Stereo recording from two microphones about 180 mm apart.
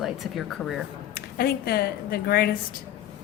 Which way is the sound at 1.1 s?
55° left (ahead or behind).